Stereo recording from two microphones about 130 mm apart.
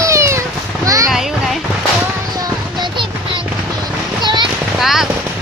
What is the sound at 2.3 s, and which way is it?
Music, 30° right (ahead or behind).